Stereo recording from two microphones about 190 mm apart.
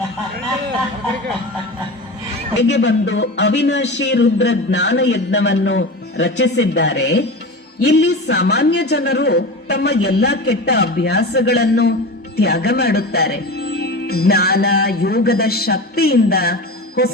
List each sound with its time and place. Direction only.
2.6 s a man's voice: 65° left (ahead or behind)